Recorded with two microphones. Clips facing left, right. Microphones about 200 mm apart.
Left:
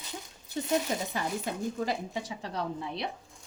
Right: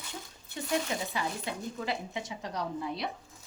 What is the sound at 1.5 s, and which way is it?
A woman's voice, 45° left (ahead or behind).